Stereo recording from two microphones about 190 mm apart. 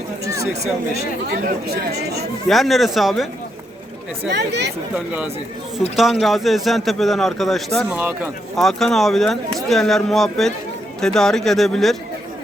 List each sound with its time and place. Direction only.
1.4 s speech: 50° right (ahead or behind)
2.5 s speech: centre (ahead or behind)
4.4 s speech: 60° right (ahead or behind)
6.0 s speech: centre (ahead or behind)
7.9 s speech: 10° right (ahead or behind)
8.5 s speech: centre (ahead or behind)